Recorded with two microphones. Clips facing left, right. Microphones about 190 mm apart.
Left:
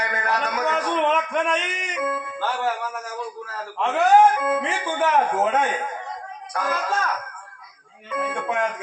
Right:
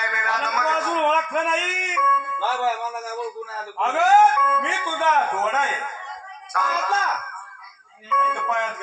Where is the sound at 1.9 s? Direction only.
35° left (ahead or behind).